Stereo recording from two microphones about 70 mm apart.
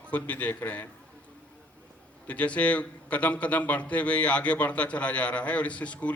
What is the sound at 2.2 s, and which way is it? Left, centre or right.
A man's voice, centre.